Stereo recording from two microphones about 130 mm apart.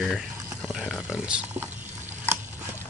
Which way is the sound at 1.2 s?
5° right (ahead or behind).